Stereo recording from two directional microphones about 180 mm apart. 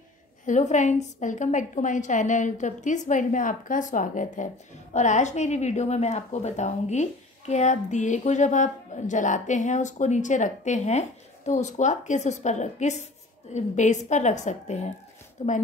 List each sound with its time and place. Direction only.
0.5 s a woman's voice: 45° left (ahead or behind)